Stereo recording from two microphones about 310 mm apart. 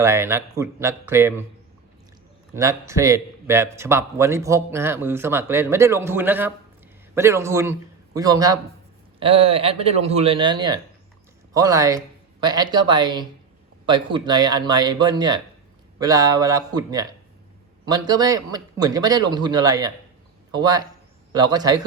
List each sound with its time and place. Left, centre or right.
0.0 s speech: centre
2.6 s speech: centre